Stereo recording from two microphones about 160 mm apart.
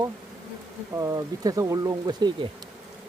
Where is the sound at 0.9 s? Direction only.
20° right (ahead or behind).